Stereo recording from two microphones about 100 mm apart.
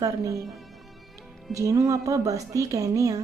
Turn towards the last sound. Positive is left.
turn(degrees=-35)  # may be behind; listen again after turning